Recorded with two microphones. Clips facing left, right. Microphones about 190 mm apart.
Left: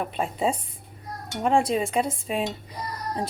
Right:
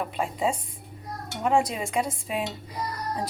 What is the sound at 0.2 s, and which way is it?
Speech, 30° left (ahead or behind).